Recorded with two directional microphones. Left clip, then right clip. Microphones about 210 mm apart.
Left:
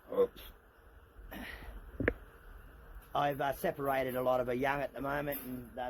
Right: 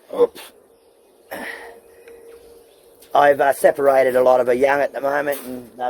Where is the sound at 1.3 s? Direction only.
25° right (ahead or behind).